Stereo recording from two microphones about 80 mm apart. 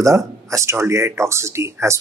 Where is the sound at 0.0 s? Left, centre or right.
Right.